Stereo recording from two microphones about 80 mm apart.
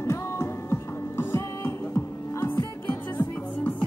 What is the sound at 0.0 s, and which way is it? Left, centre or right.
Music, left.